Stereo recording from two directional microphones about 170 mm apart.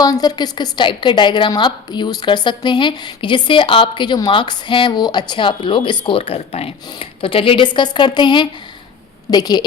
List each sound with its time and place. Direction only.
0.0 s a woman's voice: 20° left (ahead or behind)